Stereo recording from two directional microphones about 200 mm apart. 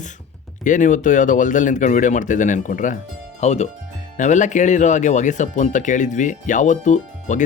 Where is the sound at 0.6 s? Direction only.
40° left (ahead or behind).